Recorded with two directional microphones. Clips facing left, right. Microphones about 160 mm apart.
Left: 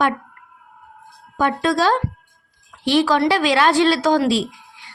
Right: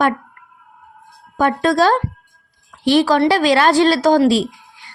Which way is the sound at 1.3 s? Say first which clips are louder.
Right 3 dB; 45° right (ahead or behind).